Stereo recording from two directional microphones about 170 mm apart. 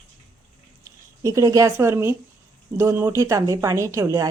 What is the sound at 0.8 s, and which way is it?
Speech, 20° right (ahead or behind).